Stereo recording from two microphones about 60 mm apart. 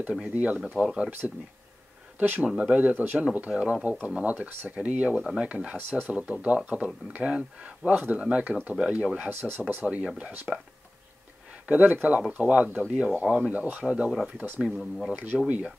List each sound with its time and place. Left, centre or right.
0.1 s speech: centre
1.2 s speech: centre
2.4 s speech: centre
3.3 s speech: centre
5.8 s speech: right
9.3 s speech: right
9.8 s speech: centre
11.6 s speech: right
14.7 s speech: centre
15.3 s speech: centre